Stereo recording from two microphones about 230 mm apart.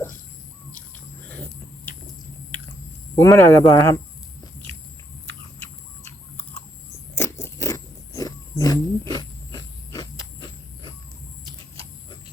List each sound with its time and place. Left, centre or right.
3.2 s speech: centre
7.2 s crunch: centre